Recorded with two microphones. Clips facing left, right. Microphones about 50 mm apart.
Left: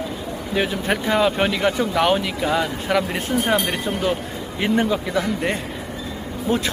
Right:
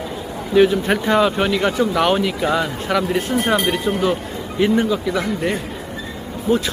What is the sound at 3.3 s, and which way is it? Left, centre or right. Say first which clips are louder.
Speech: left 1 dB; centre.